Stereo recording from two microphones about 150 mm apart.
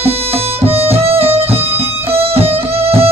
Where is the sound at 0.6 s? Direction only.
40° right (ahead or behind).